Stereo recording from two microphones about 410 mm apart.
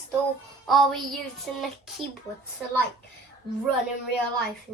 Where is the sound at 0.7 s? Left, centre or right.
Centre.